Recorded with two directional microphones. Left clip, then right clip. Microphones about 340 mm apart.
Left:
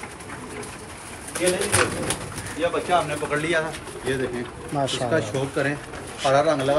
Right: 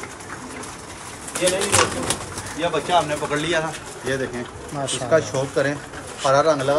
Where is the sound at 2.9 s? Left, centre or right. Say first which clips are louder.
Right 4 dB; right.